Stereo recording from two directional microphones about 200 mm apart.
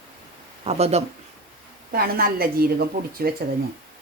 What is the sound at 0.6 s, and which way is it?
Speech, 30° right (ahead or behind).